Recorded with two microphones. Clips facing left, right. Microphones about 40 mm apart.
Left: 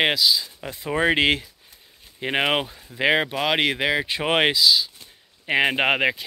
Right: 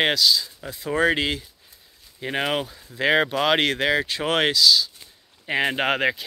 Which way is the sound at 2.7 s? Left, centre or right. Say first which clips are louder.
Even; centre.